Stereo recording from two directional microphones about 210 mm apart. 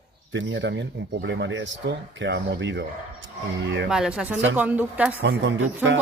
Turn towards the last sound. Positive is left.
turn(degrees=-60)  # may be behind; listen again after turning